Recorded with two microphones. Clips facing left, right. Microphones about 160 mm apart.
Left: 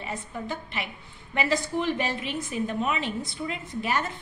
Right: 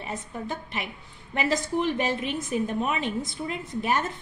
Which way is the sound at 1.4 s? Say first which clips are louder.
Right 1 dB; 45° right (ahead or behind).